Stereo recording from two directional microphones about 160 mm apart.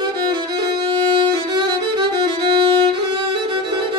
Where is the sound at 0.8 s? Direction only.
30° right (ahead or behind).